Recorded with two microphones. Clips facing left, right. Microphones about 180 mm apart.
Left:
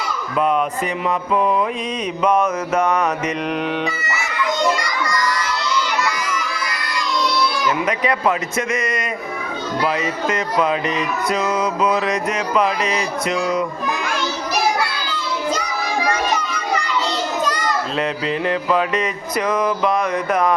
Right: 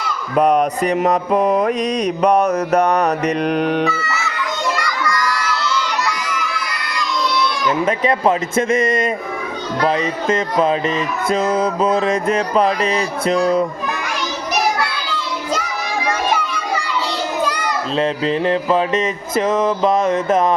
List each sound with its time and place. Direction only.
0.3 s mantra: 45° right (ahead or behind)
2.2 s music: 40° right (ahead or behind)
4.8 s children shouting: 20° left (ahead or behind)
7.9 s music: 30° right (ahead or behind)
17.9 s music: 30° right (ahead or behind)